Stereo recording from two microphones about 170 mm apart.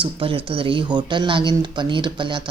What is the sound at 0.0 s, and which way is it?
Speech, 30° right (ahead or behind).